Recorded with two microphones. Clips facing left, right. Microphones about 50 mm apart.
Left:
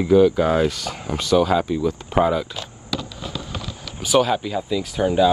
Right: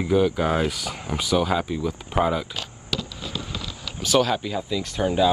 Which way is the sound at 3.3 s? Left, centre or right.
Right.